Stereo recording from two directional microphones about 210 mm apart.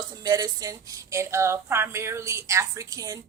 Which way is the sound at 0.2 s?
20° right (ahead or behind).